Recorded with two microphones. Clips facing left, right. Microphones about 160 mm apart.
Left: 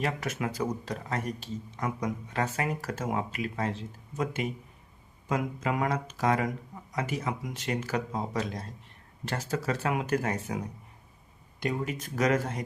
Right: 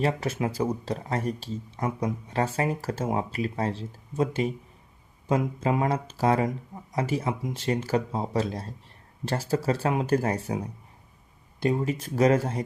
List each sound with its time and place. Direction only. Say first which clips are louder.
0.0 s speech: right 5 dB; 30° right (ahead or behind)
11.6 s speech: right 6 dB; 30° right (ahead or behind)